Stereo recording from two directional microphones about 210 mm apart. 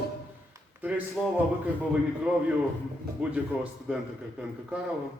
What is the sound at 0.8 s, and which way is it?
Speech, 5° right (ahead or behind).